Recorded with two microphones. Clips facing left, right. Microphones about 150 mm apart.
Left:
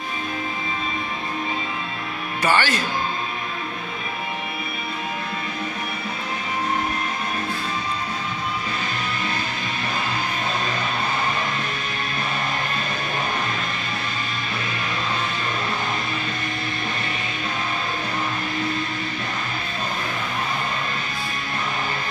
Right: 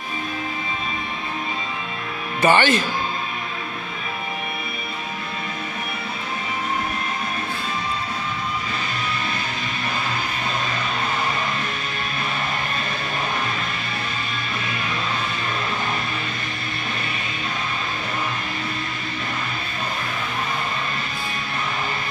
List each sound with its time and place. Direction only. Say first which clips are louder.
2.4 s speech: right 4 dB; 20° right (ahead or behind)